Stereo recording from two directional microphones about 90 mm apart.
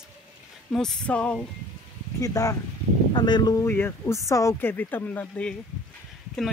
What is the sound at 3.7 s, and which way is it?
Speech, 25° left (ahead or behind).